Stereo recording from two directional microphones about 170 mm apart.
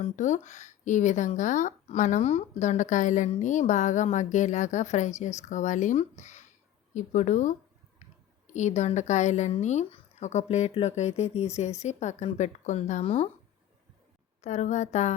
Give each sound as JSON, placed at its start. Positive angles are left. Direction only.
{"t": 0.0, "sound": "speech", "side_deg": 45}
{"t": 8.5, "sound": "speech", "side_deg": 45}
{"t": 14.4, "sound": "speech", "side_deg": 45}